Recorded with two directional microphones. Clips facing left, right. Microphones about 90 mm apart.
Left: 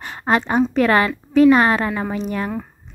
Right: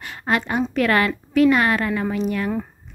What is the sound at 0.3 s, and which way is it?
A woman's voice, 30° left (ahead or behind).